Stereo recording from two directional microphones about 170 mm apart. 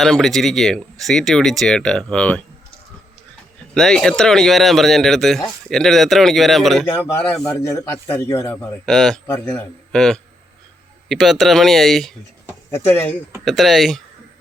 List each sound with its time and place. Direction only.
0.0 s speech: centre (ahead or behind)
3.8 s speech: 5° left (ahead or behind)
7.4 s speech: 20° left (ahead or behind)
8.9 s speech: centre (ahead or behind)
9.2 s speech: 10° left (ahead or behind)
9.9 s speech: centre (ahead or behind)
12.7 s speech: 10° left (ahead or behind)
13.4 s speech: centre (ahead or behind)